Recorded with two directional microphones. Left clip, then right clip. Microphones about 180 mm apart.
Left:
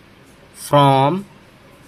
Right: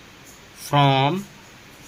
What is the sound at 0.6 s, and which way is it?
Speech, 25° left (ahead or behind).